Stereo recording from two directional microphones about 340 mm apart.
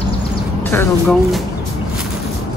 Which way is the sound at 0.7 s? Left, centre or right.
Centre.